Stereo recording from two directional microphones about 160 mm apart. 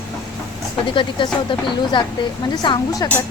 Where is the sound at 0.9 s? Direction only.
30° left (ahead or behind).